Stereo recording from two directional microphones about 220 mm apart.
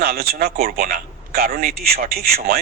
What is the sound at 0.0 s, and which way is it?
A man's voice, 45° right (ahead or behind).